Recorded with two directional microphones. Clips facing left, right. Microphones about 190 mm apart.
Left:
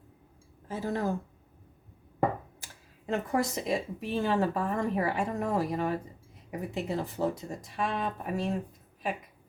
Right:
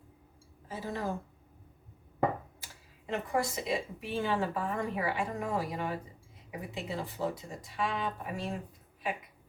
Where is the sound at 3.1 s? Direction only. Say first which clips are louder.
Left 3 dB; 45° left (ahead or behind).